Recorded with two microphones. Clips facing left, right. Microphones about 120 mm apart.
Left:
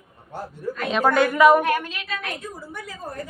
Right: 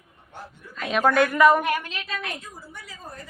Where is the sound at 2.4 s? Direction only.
50° left (ahead or behind).